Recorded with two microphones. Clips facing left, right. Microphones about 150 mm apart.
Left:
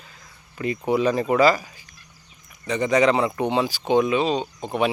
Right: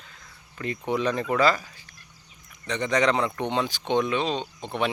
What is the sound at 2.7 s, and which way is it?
Speech, 10° left (ahead or behind).